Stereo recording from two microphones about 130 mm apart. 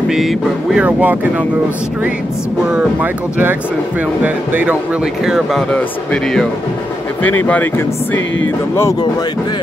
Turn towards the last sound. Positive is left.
turn(degrees=15)  # may be behind; listen again after turning